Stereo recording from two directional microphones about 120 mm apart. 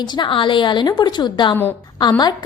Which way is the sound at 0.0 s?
40° left (ahead or behind).